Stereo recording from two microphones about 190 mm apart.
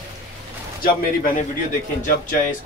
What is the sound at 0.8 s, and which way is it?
Speech, 45° left (ahead or behind).